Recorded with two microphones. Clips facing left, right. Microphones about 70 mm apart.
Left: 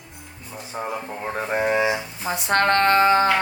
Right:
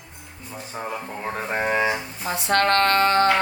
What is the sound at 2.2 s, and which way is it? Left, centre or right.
Speech, left.